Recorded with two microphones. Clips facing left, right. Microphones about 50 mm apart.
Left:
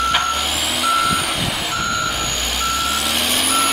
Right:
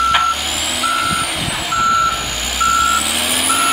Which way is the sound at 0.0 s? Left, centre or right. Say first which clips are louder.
Right 4 dB; centre.